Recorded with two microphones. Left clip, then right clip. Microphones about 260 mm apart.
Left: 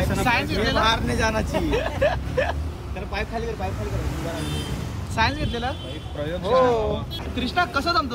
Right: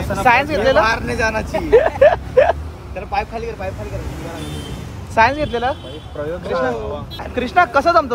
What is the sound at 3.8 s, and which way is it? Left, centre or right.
Speech, centre.